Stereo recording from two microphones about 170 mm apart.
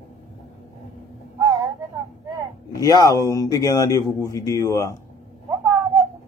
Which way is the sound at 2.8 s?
20° left (ahead or behind).